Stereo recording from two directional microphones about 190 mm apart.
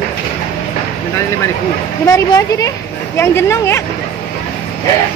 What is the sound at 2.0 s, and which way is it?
A woman's voice, 15° left (ahead or behind).